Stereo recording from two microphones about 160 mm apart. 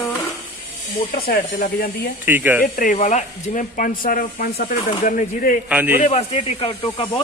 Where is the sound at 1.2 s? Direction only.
65° left (ahead or behind).